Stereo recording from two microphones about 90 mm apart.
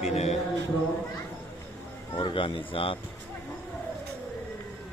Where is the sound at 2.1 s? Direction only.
70° left (ahead or behind).